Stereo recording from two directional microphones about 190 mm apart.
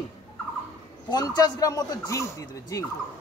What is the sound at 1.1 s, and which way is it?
Speech, 20° left (ahead or behind).